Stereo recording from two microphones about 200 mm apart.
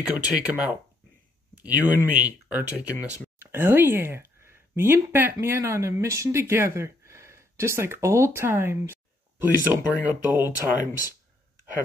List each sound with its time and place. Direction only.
0.1 s speech: 10° right (ahead or behind)
10.4 s speech: 20° left (ahead or behind)